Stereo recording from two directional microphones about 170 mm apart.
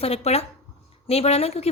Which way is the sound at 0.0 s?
35° left (ahead or behind).